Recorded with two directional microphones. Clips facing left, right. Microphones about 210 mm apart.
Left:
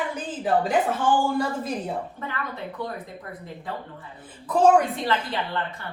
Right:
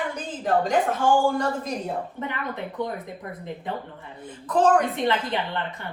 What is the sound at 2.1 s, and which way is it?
Speech, 20° right (ahead or behind).